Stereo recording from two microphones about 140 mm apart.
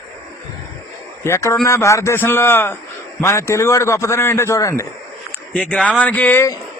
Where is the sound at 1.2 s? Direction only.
20° left (ahead or behind).